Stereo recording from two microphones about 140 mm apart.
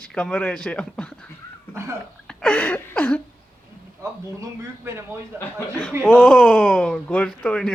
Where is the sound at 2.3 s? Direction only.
10° left (ahead or behind).